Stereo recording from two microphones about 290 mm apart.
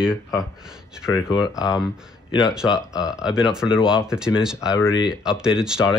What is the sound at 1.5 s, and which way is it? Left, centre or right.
Speech, centre.